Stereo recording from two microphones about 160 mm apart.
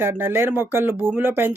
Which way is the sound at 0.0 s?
15° right (ahead or behind).